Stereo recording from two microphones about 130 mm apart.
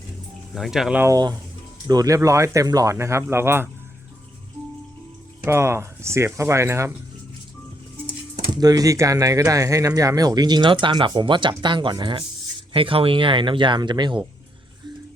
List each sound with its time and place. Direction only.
0.5 s speech: centre (ahead or behind)
0.9 s speech: 25° right (ahead or behind)
5.5 s speech: 20° right (ahead or behind)
8.6 s speech: 30° right (ahead or behind)